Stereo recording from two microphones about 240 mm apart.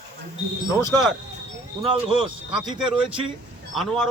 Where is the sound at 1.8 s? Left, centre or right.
Right.